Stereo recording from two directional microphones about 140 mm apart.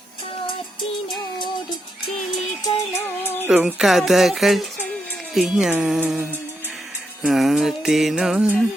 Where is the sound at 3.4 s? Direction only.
10° right (ahead or behind).